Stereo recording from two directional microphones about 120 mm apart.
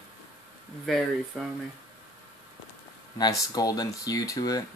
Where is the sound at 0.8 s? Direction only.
Centre (ahead or behind).